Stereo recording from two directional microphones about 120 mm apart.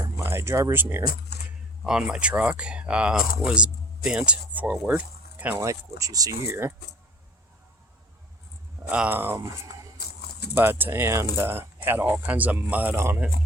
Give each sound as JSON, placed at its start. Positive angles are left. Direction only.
{"t": 0.2, "sound": "speech", "side_deg": -20}
{"t": 1.8, "sound": "speech", "side_deg": -5}
{"t": 5.4, "sound": "speech", "side_deg": -15}
{"t": 5.6, "sound": "speech", "side_deg": -30}
{"t": 8.8, "sound": "speech", "side_deg": -10}
{"t": 9.4, "sound": "speech", "side_deg": -30}
{"t": 10.5, "sound": "speech", "side_deg": -15}